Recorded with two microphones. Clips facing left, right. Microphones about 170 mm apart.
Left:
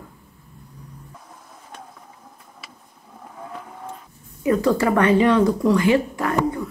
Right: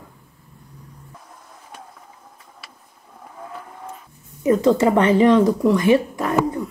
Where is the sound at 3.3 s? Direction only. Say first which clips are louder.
Even; centre (ahead or behind).